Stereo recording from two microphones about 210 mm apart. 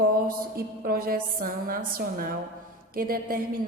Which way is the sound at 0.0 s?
45° right (ahead or behind).